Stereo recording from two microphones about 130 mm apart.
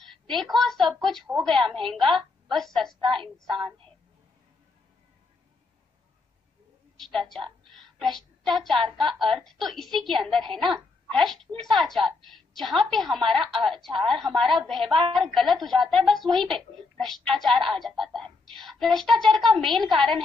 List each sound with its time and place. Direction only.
0.0 s a woman's voice: centre (ahead or behind)
3.5 s speech: 40° right (ahead or behind)
7.0 s a woman's voice: centre (ahead or behind)
7.7 s a sound: centre (ahead or behind)
8.9 s a woman's voice: centre (ahead or behind)